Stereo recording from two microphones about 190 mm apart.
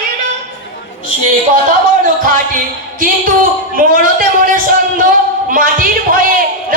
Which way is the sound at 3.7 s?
45° right (ahead or behind).